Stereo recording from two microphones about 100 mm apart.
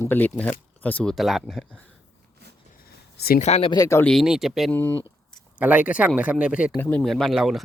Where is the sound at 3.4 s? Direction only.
90° left.